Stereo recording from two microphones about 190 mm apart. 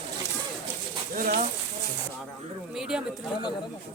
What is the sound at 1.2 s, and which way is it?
Speech, 45° right (ahead or behind).